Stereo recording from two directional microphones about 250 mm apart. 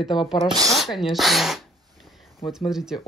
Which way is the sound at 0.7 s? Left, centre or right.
Centre.